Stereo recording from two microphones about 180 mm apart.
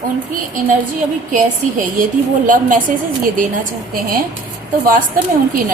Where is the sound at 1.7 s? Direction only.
50° right (ahead or behind).